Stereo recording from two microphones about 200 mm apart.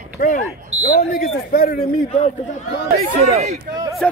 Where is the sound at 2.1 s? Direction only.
30° left (ahead or behind).